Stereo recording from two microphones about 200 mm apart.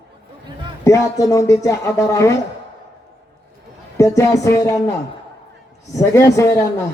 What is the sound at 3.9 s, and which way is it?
Speech, 15° left (ahead or behind).